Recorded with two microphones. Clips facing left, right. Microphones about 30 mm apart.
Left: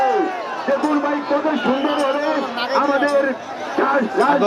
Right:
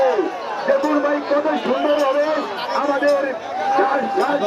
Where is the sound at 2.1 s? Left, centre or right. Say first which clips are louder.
Right 2 dB; left.